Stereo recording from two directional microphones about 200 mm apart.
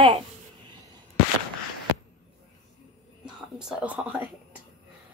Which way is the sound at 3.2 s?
5° right (ahead or behind).